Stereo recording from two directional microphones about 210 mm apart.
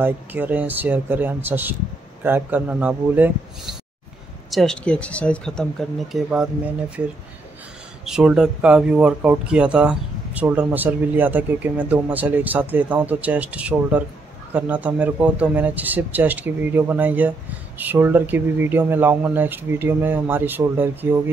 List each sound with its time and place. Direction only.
0.0 s speech: 10° right (ahead or behind)
8.0 s speech: 5° right (ahead or behind)